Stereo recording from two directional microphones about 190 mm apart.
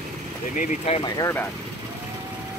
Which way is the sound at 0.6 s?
35° left (ahead or behind).